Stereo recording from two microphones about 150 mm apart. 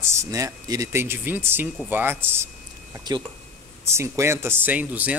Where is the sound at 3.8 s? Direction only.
15° right (ahead or behind).